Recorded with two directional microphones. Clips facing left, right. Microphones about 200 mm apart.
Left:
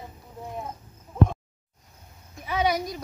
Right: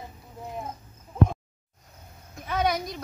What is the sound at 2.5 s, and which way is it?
Speech, 10° left (ahead or behind).